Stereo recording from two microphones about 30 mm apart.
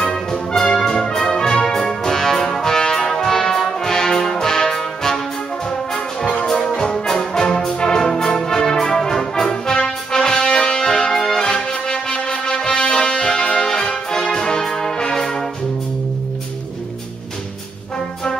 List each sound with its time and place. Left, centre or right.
0.0 s music: left
0.7 s brass instrument: centre
6.4 s music: centre
8.0 s music: centre
8.9 s brass instrument: centre
9.5 s music: left
11.5 s music: left
13.7 s brass instrument: centre